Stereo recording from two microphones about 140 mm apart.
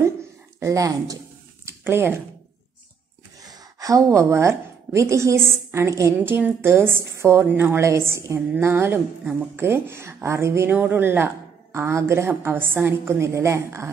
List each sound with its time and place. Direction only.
0.6 s a woman's voice: 25° right (ahead or behind)
3.4 s a woman's voice: 25° right (ahead or behind)